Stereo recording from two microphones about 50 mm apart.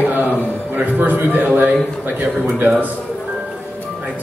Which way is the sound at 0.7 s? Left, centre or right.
Right.